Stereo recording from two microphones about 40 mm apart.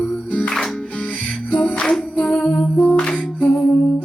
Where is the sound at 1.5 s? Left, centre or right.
Left.